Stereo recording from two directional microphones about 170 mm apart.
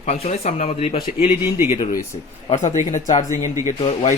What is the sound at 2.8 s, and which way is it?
Speech, 45° left (ahead or behind).